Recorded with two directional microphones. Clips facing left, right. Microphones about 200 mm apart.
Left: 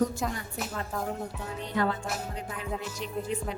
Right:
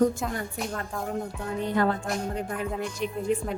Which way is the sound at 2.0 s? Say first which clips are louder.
Right 5 dB; 5° left (ahead or behind).